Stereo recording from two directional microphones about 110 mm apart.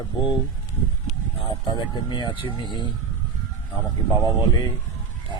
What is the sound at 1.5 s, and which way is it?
Speech, 40° left (ahead or behind).